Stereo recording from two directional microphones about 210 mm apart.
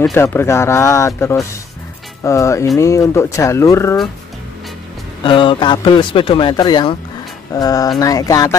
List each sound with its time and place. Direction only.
0.0 s speech: 10° left (ahead or behind)
5.2 s a man's voice: 25° left (ahead or behind)